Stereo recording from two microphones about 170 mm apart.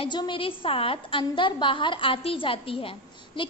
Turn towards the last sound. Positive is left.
turn(degrees=30)  # may be behind; listen again after turning